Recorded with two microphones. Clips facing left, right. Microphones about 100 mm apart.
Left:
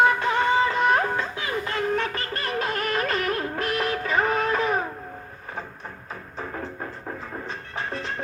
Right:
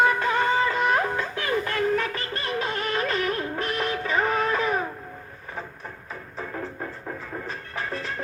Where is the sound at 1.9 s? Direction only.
35° left (ahead or behind).